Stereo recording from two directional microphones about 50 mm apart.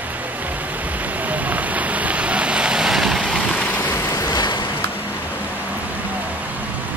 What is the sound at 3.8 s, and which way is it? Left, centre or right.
Vehicle, left.